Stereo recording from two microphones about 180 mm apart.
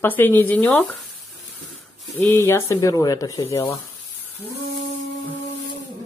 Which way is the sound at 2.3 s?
15° left (ahead or behind).